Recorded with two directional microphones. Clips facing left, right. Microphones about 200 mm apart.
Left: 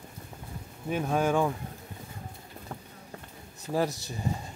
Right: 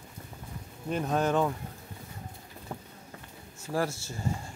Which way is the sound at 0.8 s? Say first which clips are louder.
Left 1 dB; 5° left (ahead or behind).